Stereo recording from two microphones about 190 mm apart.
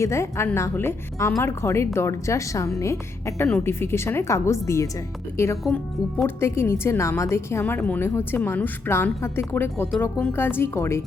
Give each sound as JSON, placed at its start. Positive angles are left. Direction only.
{"t": 0.0, "sound": "a woman's voice", "side_deg": 15}
{"t": 5.6, "sound": "speech", "side_deg": 0}
{"t": 6.2, "sound": "a woman's voice", "side_deg": 15}